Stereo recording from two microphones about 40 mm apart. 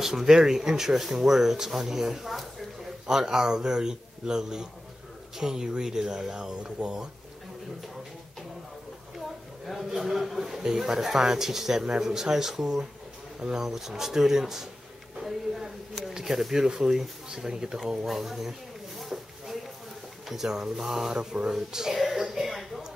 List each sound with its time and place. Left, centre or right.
0.0 s speech: centre
9.7 s speech: centre
18.0 s speech: centre
18.9 s a sound: centre
20.2 s speech: centre
21.1 s mantra: centre
21.5 s a sound: centre